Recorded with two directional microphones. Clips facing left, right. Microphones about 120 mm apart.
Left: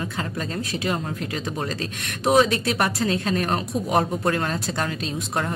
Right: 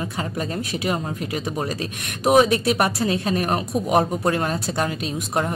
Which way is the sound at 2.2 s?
15° right (ahead or behind).